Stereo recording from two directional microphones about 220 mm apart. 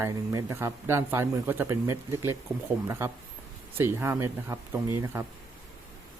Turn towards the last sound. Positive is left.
turn(degrees=-10)  # may be behind; listen again after turning